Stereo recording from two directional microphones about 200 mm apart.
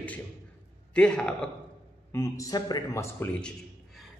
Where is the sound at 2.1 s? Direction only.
15° left (ahead or behind).